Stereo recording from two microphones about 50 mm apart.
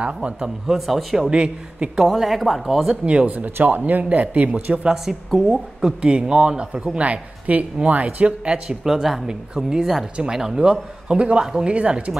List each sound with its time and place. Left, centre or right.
0.0 s a man's voice: right
0.7 s speech: centre
1.3 s a man's voice: centre
2.0 s speech: centre
3.3 s a man's voice: right
4.8 s speech: centre
5.5 s a man's voice: centre
8.8 s a man's voice: centre; by 12.0 s right